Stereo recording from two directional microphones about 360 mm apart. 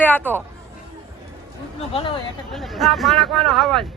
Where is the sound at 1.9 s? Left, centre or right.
Centre.